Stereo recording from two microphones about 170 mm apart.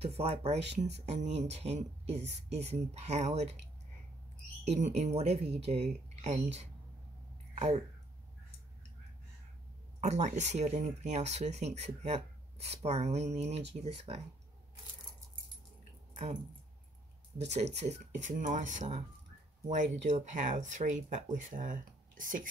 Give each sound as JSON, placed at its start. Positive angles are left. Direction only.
{"t": 0.0, "sound": "speech", "side_deg": -35}
{"t": 4.6, "sound": "speech", "side_deg": -45}
{"t": 9.9, "sound": "speech", "side_deg": -45}
{"t": 17.4, "sound": "speech", "side_deg": -40}